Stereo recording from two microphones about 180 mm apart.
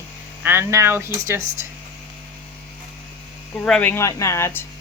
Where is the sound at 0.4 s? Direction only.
15° right (ahead or behind).